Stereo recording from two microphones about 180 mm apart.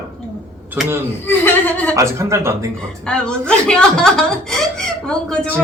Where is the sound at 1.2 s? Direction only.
10° left (ahead or behind).